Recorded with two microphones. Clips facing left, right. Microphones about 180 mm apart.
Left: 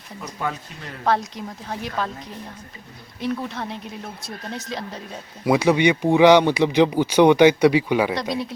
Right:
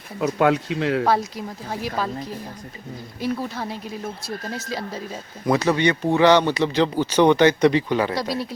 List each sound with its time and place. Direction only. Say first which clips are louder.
0.3 s speech: right 10 dB; 75° right (ahead or behind)
1.0 s a woman's voice: right 1 dB; 5° right (ahead or behind)
3.2 s a woman's voice: even; 5° right (ahead or behind)
5.5 s speech: left 2 dB; 10° left (ahead or behind)
8.1 s a woman's voice: even; centre (ahead or behind)